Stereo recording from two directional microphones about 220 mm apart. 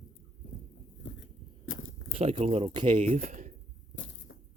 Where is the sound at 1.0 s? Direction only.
60° left (ahead or behind).